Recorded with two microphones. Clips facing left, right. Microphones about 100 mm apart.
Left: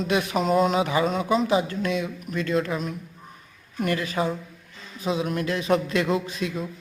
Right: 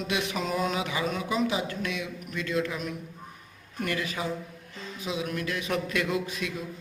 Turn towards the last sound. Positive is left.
turn(degrees=35)  # may be behind; listen again after turning